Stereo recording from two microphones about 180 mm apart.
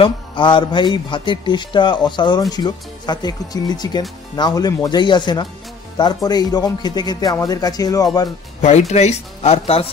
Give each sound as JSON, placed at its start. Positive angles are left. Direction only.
{"t": 0.0, "sound": "a man's voice", "side_deg": 25}
{"t": 8.5, "sound": "speech", "side_deg": 40}